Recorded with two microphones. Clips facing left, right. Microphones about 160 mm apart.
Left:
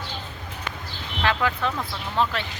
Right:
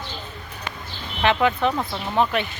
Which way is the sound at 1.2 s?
20° right (ahead or behind).